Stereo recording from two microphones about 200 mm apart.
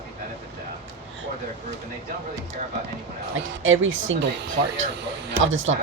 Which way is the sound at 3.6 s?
80° right.